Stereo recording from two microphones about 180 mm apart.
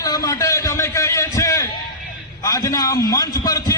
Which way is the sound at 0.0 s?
20° left (ahead or behind).